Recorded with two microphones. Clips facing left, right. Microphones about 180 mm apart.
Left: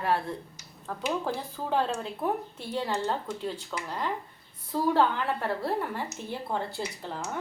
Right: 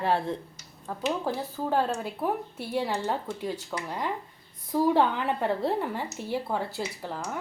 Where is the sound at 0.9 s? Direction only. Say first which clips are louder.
Right 1 dB; 5° right (ahead or behind).